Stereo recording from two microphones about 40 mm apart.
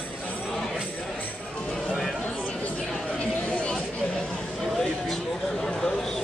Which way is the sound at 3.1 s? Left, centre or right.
Left.